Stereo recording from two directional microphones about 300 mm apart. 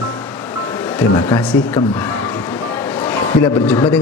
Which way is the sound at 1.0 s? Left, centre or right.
Centre.